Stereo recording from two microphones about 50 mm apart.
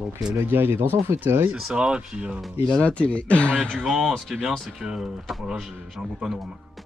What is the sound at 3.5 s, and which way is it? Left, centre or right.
Speech, centre.